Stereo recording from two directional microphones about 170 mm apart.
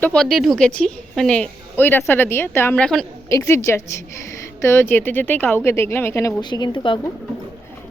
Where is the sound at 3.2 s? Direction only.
15° left (ahead or behind).